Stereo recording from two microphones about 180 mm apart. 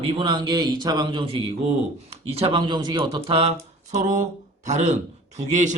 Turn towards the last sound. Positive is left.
turn(degrees=-40)  # may be behind; listen again after turning